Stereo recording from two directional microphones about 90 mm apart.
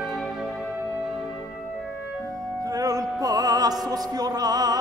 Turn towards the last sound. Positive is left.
turn(degrees=-45)  # may be behind; listen again after turning